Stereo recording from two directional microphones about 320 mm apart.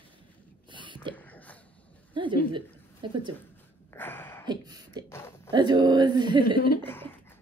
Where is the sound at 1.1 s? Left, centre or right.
Centre.